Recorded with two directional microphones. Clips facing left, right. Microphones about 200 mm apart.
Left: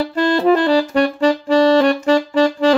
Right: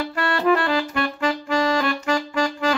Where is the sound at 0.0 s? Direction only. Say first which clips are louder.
Left 7 dB; 35° left (ahead or behind).